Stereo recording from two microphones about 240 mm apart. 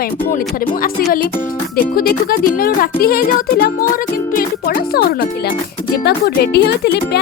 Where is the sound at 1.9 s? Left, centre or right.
Left.